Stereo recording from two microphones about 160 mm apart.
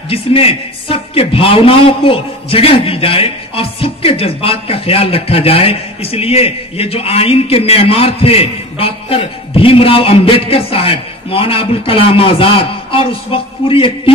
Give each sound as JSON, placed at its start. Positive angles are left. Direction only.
{"t": 0.1, "sound": "a man's voice", "side_deg": 35}